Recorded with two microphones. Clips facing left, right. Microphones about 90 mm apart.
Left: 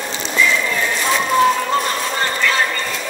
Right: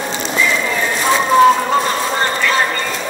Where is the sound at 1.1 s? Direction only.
25° right (ahead or behind).